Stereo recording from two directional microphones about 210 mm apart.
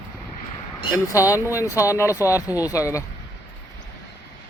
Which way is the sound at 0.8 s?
15° left (ahead or behind).